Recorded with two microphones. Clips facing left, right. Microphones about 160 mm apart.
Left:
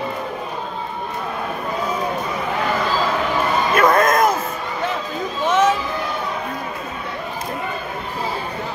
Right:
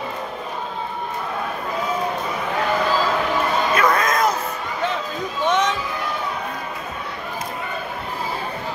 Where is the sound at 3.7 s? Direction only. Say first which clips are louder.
Left 6 dB; 50° left (ahead or behind).